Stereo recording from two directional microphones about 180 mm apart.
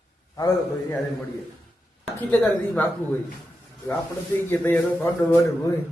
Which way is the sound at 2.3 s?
5° left (ahead or behind).